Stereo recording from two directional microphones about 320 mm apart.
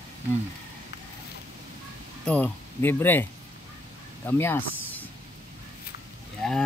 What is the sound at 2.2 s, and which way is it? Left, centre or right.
Speech, centre.